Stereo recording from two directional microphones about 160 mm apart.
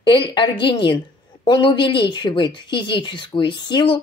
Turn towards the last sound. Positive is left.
turn(degrees=30)  # may be behind; listen again after turning